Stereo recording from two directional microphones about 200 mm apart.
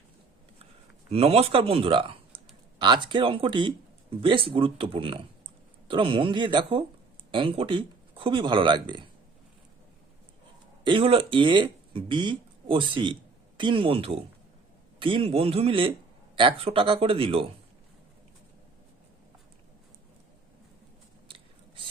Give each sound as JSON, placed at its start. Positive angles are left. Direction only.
{"t": 1.1, "sound": "a man's voice", "side_deg": -30}
{"t": 10.8, "sound": "a man's voice", "side_deg": -25}
{"t": 21.2, "sound": "biting", "side_deg": -25}